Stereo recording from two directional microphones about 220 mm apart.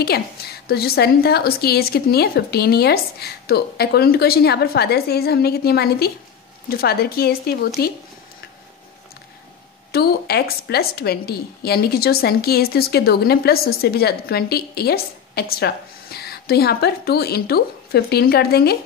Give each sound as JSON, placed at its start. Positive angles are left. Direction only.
{"t": 0.0, "sound": "a woman's voice", "side_deg": 45}
{"t": 9.9, "sound": "a woman's voice", "side_deg": 45}